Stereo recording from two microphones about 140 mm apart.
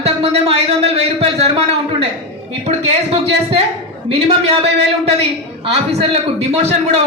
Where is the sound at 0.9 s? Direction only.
45° right (ahead or behind).